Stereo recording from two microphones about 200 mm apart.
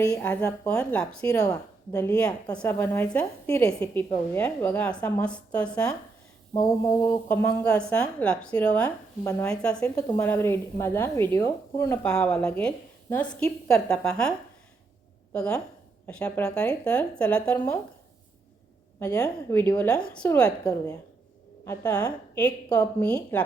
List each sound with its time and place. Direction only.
0.0 s a woman's voice: 10° left (ahead or behind)
1.5 s a woman's voice: 15° left (ahead or behind)
18.9 s a woman's voice: 15° left (ahead or behind)
20.4 s a woman's voice: 20° left (ahead or behind)